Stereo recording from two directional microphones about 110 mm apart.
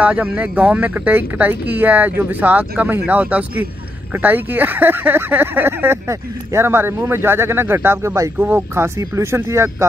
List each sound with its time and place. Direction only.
0.0 s speech: 10° right (ahead or behind)